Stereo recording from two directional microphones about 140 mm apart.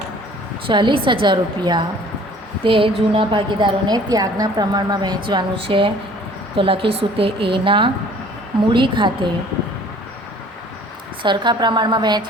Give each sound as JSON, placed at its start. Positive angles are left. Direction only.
{"t": 0.7, "sound": "a woman's voice", "side_deg": -35}
{"t": 11.2, "sound": "a woman's voice", "side_deg": -35}